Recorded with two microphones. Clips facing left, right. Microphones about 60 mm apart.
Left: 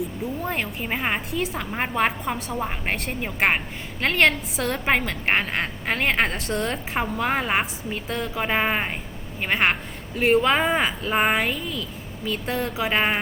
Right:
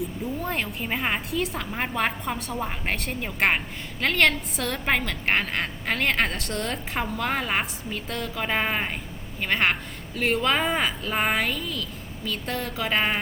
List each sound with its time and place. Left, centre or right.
0.4 s a woman's voice: centre
8.4 s a woman's voice: centre